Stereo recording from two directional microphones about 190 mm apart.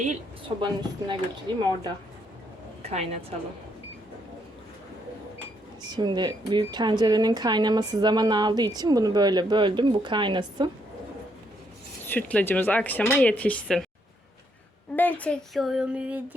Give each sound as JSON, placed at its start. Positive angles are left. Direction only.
{"t": 0.4, "sound": "a woman's voice", "side_deg": -25}
{"t": 2.8, "sound": "a woman's voice", "side_deg": -35}
{"t": 5.8, "sound": "a woman's voice", "side_deg": -25}
{"t": 12.0, "sound": "speech", "side_deg": 10}
{"t": 14.9, "sound": "speech", "side_deg": 10}